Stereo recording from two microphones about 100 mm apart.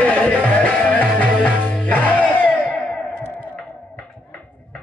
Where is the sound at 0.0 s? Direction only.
15° left (ahead or behind).